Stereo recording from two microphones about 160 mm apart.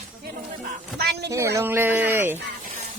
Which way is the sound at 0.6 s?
85° right.